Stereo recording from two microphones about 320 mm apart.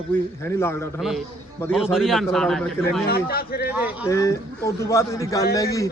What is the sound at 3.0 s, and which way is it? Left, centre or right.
Speech, left.